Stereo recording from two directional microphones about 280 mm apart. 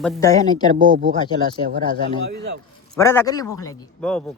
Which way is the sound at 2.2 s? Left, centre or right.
Right.